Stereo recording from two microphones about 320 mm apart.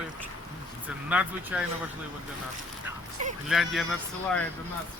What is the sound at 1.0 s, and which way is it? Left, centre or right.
Speech, centre.